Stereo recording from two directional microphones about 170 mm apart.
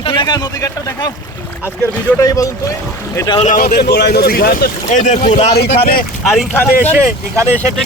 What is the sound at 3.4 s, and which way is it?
Speech, 55° left (ahead or behind).